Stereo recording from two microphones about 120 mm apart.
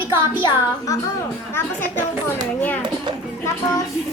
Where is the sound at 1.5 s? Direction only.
20° left (ahead or behind).